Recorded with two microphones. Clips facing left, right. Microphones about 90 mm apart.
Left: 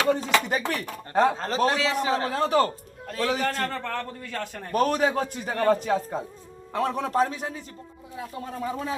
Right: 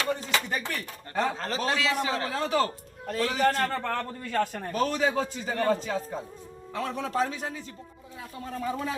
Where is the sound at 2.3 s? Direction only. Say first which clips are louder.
Left 5 dB; 45° left (ahead or behind).